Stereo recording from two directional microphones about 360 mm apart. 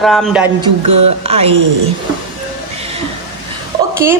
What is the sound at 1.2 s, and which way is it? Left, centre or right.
Speech, centre.